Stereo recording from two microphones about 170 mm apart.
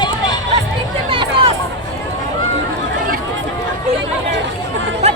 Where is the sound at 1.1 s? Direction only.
30° right (ahead or behind).